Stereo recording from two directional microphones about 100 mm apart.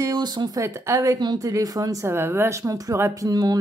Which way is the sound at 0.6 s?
30° right (ahead or behind).